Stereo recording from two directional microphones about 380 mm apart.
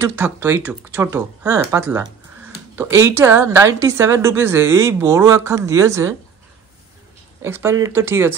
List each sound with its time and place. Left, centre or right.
0.0 s a woman's voice: centre
7.4 s speech: centre